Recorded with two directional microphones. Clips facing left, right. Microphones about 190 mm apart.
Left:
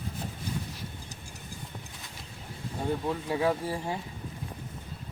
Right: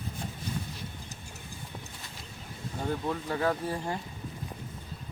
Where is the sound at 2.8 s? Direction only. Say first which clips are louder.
Left 1 dB; 5° left (ahead or behind).